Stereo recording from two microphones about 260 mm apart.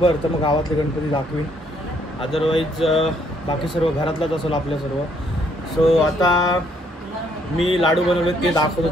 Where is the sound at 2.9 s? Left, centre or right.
Centre.